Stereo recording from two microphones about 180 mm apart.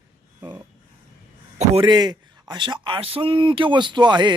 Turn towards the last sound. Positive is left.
turn(degrees=-25)  # may be behind; listen again after turning